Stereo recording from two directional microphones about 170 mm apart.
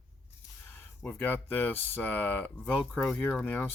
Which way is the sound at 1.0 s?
10° left (ahead or behind).